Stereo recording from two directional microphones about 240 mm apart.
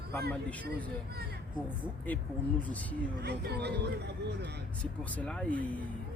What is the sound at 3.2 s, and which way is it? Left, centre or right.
Speech, right.